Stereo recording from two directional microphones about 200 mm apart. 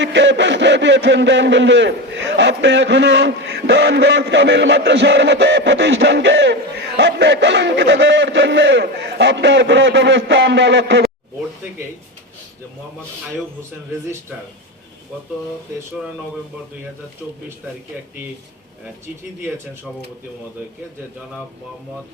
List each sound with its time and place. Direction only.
0.0 s a man's voice: 65° right (ahead or behind)